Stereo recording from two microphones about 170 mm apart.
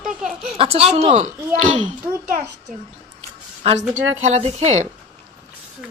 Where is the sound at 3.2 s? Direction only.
35° right (ahead or behind).